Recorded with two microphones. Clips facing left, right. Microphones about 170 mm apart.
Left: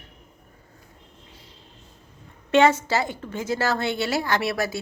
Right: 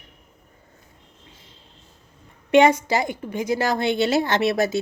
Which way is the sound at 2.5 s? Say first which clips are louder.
Right 2 dB; 15° right (ahead or behind).